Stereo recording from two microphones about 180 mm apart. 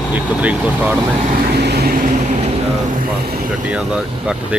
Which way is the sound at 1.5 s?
65° right (ahead or behind).